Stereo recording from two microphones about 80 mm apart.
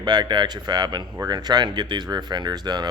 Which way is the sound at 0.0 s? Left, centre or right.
Right.